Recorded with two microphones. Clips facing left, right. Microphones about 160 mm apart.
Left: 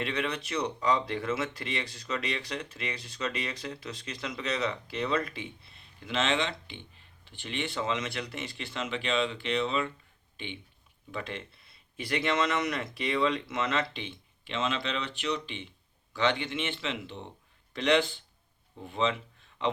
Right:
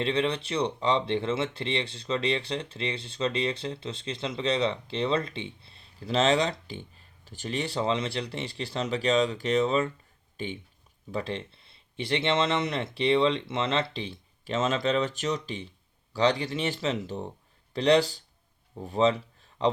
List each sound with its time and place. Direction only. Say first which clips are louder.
0.0 s speech: right 5 dB; 30° right (ahead or behind)